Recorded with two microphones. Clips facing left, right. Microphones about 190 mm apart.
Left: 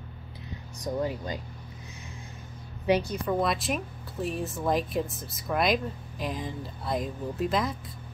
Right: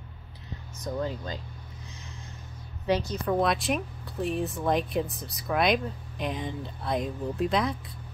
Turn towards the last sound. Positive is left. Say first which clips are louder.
# right 1 dB
turn(degrees=0)  # may be behind; listen again after turning